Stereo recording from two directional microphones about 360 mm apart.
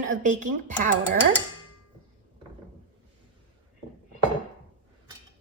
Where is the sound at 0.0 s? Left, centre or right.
Right.